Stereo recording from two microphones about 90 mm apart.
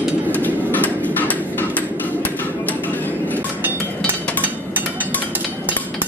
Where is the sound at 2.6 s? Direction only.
20° left (ahead or behind).